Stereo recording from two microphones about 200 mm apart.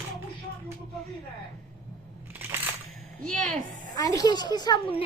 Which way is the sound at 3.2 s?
5° left (ahead or behind).